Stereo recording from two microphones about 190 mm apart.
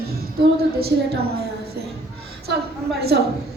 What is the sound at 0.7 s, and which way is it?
Speech, 55° right (ahead or behind).